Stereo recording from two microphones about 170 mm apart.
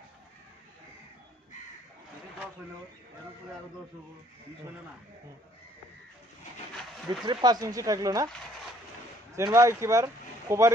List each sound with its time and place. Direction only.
7.1 s speech: 25° right (ahead or behind)
9.3 s speech: 15° right (ahead or behind)